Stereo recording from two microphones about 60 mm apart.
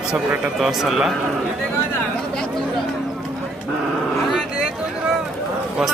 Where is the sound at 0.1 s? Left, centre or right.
Right.